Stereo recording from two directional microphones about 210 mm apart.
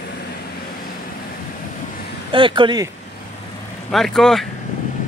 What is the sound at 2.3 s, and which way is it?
Speech, 25° right (ahead or behind).